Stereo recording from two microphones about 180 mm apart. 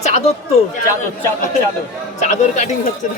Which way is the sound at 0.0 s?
40° left (ahead or behind).